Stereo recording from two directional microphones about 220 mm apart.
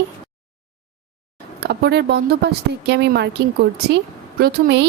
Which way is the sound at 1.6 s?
50° right (ahead or behind).